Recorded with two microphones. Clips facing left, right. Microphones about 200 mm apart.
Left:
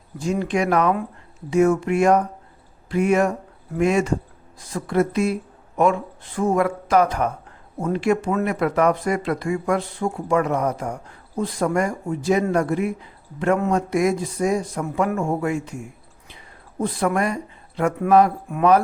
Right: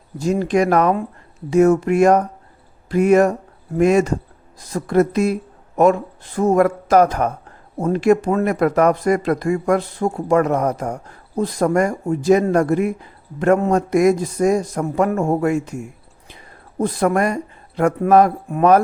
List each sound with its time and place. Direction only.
0.2 s speech: 40° right (ahead or behind)
18.4 s speech: 35° right (ahead or behind)